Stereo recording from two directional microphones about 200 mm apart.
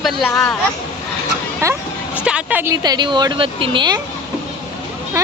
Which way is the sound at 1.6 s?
10° right (ahead or behind).